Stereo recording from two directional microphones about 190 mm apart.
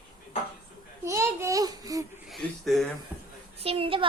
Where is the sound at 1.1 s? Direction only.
15° right (ahead or behind).